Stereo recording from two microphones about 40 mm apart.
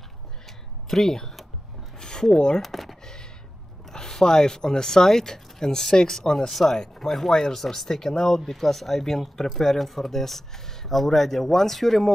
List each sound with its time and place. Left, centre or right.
0.8 s speech: centre
2.0 s a sound: centre
2.6 s computer keyboard: centre
3.9 s speech: centre